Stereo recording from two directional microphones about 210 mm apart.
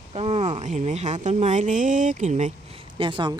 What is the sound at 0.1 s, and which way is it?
A woman's voice, 30° right (ahead or behind).